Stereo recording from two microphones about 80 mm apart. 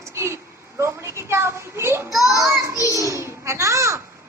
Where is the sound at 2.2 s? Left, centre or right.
Right.